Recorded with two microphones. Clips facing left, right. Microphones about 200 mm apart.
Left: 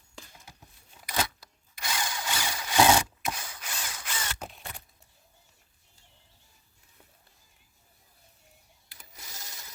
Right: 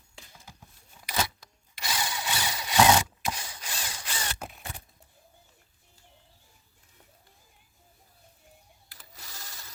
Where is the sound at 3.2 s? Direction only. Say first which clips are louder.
Right 1 dB; 30° right (ahead or behind).